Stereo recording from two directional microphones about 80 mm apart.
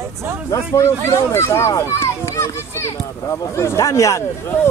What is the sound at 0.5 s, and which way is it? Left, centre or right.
Speech, left.